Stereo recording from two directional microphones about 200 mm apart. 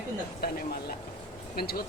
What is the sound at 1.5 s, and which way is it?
Speech, 50° left (ahead or behind).